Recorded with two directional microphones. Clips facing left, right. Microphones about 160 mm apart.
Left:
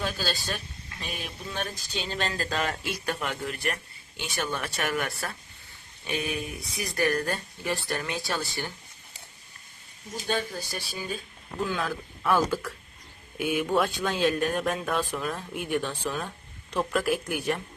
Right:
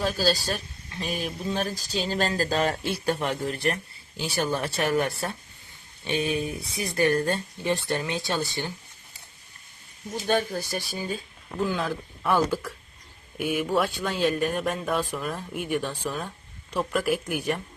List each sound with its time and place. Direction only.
0.0 s speech: 40° right (ahead or behind); by 8.7 s 20° right (ahead or behind)
10.2 s speech: 50° right (ahead or behind)
11.7 s speech: 5° right (ahead or behind)